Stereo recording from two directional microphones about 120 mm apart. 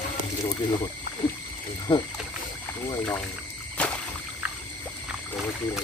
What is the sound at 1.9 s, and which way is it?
Speech, 40° left (ahead or behind).